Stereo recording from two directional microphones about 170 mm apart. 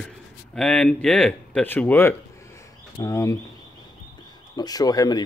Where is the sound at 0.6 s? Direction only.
5° left (ahead or behind).